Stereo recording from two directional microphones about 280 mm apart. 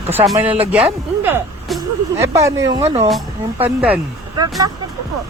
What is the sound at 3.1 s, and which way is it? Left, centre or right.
Speech, centre.